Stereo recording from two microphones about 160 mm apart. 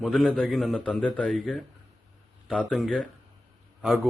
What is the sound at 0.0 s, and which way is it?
A man's voice, centre (ahead or behind).